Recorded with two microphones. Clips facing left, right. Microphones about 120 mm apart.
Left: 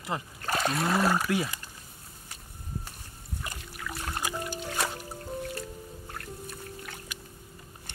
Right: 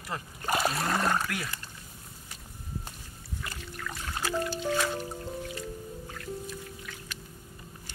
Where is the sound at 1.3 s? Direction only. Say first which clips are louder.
Left 7 dB; 20° left (ahead or behind).